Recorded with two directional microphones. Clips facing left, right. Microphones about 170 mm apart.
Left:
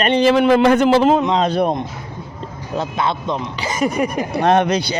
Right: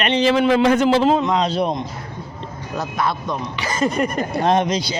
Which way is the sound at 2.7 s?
25° left (ahead or behind).